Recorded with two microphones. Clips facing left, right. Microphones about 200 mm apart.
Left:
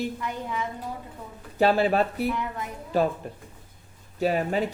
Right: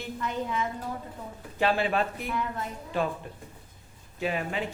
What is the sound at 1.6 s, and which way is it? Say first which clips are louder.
Speech: left 5 dB; 40° left (ahead or behind).